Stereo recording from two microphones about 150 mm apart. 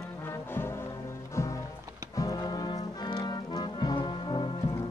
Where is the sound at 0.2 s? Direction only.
15° left (ahead or behind).